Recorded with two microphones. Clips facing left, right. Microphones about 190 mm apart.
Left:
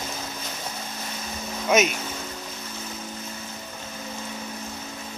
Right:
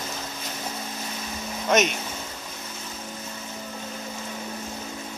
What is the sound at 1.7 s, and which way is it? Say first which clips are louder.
Speech: left 1 dB; 5° left (ahead or behind).